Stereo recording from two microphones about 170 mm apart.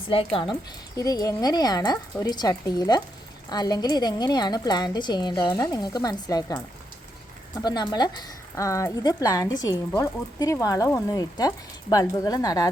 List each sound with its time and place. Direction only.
0.1 s a woman's voice: 35° left (ahead or behind)
0.9 s speech: 20° left (ahead or behind)